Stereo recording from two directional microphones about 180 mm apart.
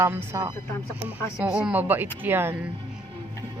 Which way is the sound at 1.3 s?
5° right (ahead or behind).